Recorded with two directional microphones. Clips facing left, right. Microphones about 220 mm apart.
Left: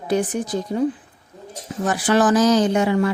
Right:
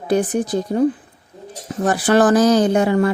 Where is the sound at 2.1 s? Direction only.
55° right (ahead or behind).